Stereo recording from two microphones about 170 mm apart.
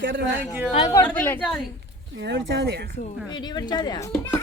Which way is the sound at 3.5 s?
25° left (ahead or behind).